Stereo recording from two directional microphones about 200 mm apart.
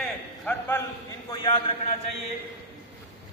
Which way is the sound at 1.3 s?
20° left (ahead or behind).